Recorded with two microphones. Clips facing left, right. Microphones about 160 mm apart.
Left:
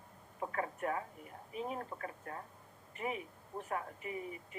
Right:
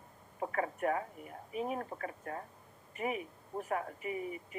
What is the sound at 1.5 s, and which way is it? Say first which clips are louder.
Speech: right 4 dB; 10° right (ahead or behind).